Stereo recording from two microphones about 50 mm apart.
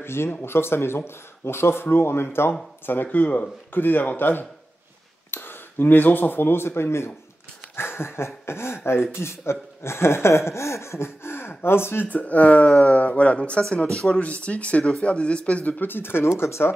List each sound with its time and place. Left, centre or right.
0.0 s speech: left
2.9 s speech: left
7.7 s a sound: left
8.5 s speech: left
12.1 s speech: left; by 14.2 s centre
14.2 s speech: left
15.8 s speech: left